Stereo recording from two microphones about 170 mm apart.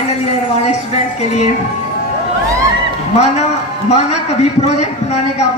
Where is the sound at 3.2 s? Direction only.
40° left (ahead or behind).